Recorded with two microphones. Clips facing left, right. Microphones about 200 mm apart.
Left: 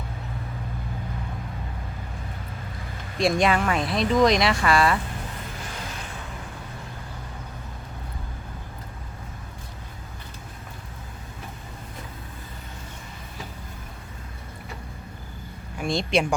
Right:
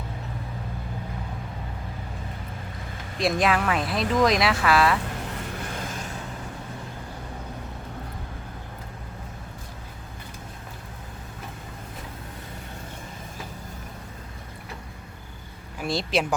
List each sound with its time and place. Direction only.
3.2 s speech: centre (ahead or behind)
5.8 s vehicle: 45° right (ahead or behind)
15.8 s speech: 5° right (ahead or behind)